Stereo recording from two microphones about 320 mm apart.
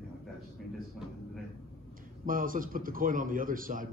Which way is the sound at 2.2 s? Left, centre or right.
Right.